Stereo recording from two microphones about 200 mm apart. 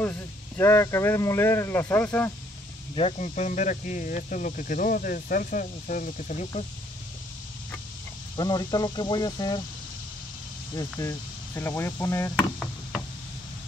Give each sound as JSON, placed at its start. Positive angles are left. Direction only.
{"t": 0.6, "sound": "speech", "side_deg": 10}
{"t": 3.0, "sound": "speech", "side_deg": 35}
{"t": 8.4, "sound": "speech", "side_deg": 20}
{"t": 10.8, "sound": "speech", "side_deg": 15}
{"t": 12.4, "sound": "chop", "side_deg": 0}